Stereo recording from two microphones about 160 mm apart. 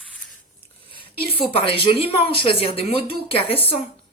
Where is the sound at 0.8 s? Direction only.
30° left (ahead or behind).